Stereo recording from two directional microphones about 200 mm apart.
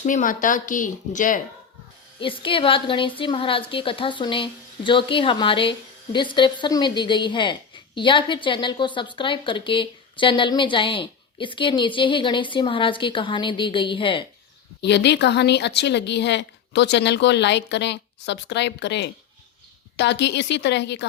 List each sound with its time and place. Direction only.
0.0 s speech: 40° left (ahead or behind)
2.2 s a woman's voice: 25° left (ahead or behind)
14.8 s a woman's voice: 60° left (ahead or behind)